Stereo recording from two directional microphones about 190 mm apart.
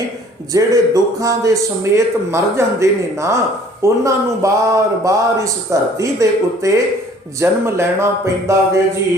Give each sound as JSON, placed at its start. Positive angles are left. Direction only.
{"t": 0.5, "sound": "a man's voice", "side_deg": -20}